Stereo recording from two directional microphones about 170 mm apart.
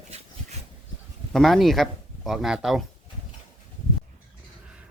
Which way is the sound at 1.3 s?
Centre (ahead or behind).